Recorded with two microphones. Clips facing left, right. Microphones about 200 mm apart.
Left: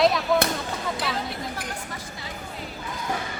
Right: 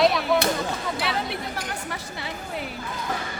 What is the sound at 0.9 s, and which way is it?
Speech, 65° right (ahead or behind).